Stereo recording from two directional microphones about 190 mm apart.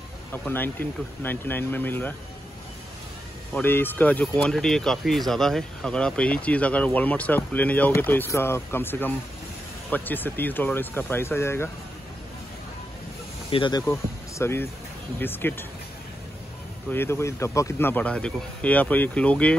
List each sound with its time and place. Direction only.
0.3 s speech: 10° left (ahead or behind)
3.5 s speech: 10° left (ahead or behind)
13.5 s speech: 25° left (ahead or behind)
16.9 s speech: 10° left (ahead or behind)